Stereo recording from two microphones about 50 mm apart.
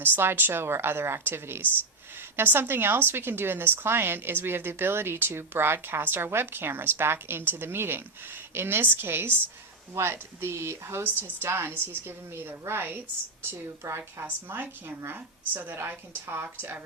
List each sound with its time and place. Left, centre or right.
0.0 s a woman's voice: right
13.8 s a woman's voice: right
14.4 s a woman's voice: right